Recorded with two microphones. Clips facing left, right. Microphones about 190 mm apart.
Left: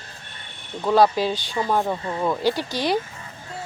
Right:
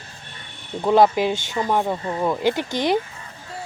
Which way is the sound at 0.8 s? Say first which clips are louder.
Right 2 dB; 20° right (ahead or behind).